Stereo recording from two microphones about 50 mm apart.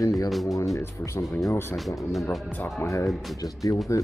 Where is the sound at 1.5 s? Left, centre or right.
Left.